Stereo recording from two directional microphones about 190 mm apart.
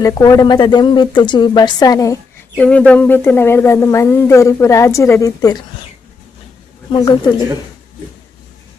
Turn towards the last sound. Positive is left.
turn(degrees=25)  # may be behind; listen again after turning